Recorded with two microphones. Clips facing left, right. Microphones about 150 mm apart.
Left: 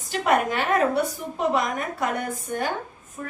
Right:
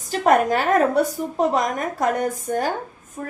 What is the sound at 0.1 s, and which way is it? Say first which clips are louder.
A woman's voice: right 5 dB; 40° right (ahead or behind).